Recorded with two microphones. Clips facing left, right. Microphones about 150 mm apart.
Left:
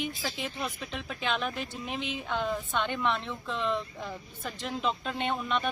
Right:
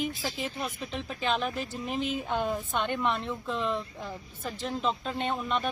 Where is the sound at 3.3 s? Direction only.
5° right (ahead or behind).